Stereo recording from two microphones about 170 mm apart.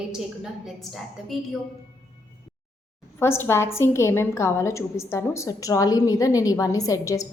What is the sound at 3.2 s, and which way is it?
A woman's voice, 15° left (ahead or behind).